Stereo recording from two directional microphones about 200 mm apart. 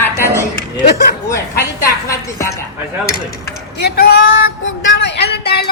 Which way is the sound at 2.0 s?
15° left (ahead or behind).